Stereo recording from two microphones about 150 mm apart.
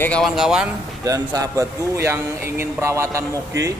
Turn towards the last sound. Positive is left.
turn(degrees=-20)  # may be behind; listen again after turning